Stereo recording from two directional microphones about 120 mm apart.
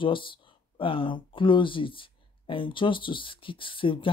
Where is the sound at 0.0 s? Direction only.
45° left (ahead or behind).